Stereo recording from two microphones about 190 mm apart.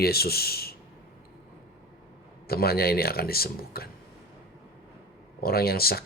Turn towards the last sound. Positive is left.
turn(degrees=55)  # may be behind; listen again after turning